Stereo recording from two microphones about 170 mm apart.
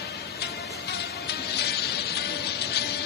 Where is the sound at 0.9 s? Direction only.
75° left (ahead or behind).